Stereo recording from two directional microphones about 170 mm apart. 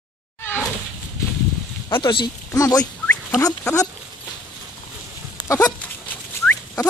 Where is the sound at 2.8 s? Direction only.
10° left (ahead or behind).